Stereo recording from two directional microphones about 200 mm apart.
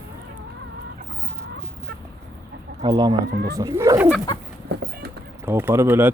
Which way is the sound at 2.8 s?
20° right (ahead or behind).